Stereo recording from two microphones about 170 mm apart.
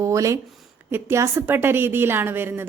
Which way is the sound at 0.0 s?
20° right (ahead or behind).